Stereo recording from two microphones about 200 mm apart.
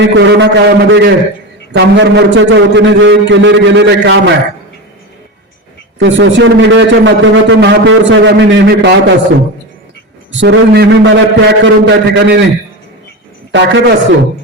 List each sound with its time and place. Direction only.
0.0 s a man's voice: 65° right (ahead or behind)
6.0 s a man's voice: 70° right (ahead or behind)
10.4 s a man's voice: 60° right (ahead or behind)
13.5 s a man's voice: 65° right (ahead or behind)